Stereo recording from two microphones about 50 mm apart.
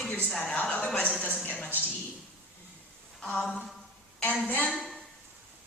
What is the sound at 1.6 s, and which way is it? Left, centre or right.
Speech, left.